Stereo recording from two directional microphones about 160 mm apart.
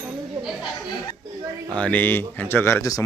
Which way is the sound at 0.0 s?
5° right (ahead or behind).